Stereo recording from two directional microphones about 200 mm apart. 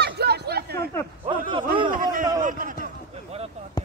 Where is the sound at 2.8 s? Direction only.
30° right (ahead or behind).